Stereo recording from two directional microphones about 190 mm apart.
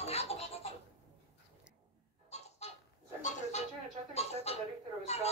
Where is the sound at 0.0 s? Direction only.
35° left (ahead or behind).